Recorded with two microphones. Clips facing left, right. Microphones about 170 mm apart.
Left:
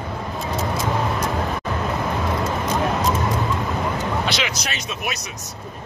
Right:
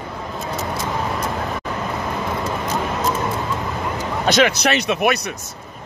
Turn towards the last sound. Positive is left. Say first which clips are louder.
# right 11 dB
turn(degrees=-65)  # may be behind; listen again after turning